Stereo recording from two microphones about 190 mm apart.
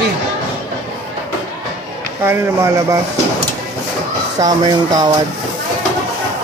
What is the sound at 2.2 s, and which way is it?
Speech, 15° right (ahead or behind).